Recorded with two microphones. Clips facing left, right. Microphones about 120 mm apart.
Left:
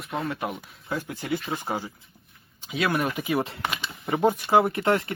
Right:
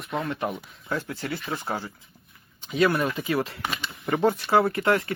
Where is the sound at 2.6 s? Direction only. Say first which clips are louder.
Right 5 dB; 5° left (ahead or behind).